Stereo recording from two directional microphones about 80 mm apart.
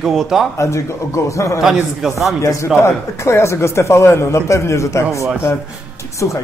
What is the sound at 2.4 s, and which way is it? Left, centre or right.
A man's voice, left.